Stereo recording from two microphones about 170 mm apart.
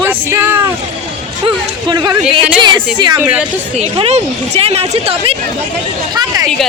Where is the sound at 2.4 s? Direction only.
30° right (ahead or behind).